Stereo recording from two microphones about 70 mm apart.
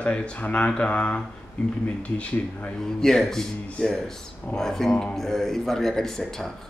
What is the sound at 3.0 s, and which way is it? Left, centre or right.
Speech, centre.